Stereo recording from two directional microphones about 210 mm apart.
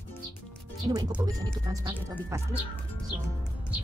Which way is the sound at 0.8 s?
20° right (ahead or behind).